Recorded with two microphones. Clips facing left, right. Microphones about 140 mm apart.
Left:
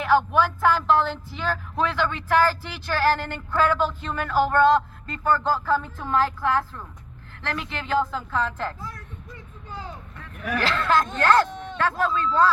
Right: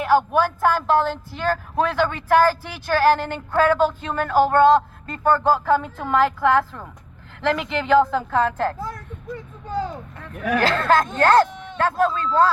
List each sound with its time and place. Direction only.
0.3 s speech: 45° right (ahead or behind)
5.6 s a woman's voice: 65° right (ahead or behind)
10.5 s speech: 45° right (ahead or behind)